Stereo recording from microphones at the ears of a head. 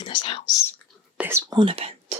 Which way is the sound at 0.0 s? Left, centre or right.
Left.